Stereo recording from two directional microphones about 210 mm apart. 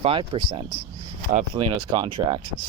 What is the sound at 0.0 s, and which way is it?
Speech, 25° right (ahead or behind).